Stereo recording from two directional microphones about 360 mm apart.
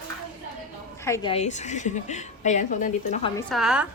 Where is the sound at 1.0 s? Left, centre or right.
Centre.